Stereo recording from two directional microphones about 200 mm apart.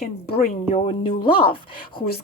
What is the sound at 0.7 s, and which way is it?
Speech, 25° left (ahead or behind).